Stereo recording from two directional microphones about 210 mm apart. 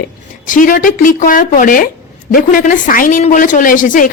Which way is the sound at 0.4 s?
40° left (ahead or behind).